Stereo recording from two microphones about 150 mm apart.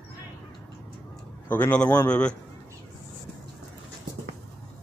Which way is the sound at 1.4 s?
10° left (ahead or behind).